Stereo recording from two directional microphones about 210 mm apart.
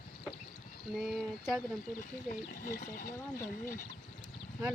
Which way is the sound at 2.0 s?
40° left (ahead or behind).